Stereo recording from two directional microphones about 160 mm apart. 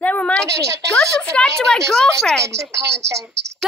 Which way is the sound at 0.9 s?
5° left (ahead or behind).